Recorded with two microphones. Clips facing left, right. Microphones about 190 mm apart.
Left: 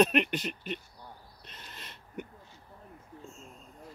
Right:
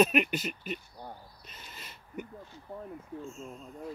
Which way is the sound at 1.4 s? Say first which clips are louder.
Even; 5° right (ahead or behind).